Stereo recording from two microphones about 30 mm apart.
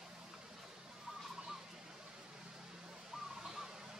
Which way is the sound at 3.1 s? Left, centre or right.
Centre.